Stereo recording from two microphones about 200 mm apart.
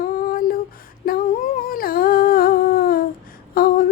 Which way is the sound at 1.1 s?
45° left (ahead or behind).